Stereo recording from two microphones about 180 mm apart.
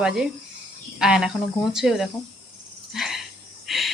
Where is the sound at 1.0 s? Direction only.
5° right (ahead or behind).